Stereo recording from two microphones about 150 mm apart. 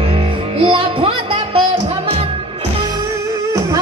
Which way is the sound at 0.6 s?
35° right (ahead or behind).